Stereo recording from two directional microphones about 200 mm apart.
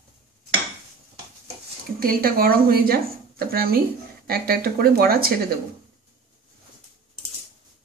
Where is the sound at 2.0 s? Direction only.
45° right (ahead or behind).